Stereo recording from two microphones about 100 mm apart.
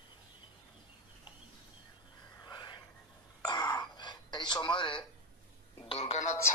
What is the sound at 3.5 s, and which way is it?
Throat clearing, 45° left (ahead or behind).